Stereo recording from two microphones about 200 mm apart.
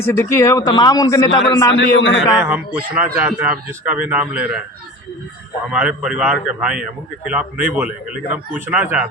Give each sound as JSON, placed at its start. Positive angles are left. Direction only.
{"t": 0.0, "sound": "speech", "side_deg": 15}
{"t": 1.7, "sound": "a man's voice", "side_deg": 65}
{"t": 2.2, "sound": "a man's voice", "side_deg": -5}
{"t": 5.7, "sound": "a man's voice", "side_deg": -5}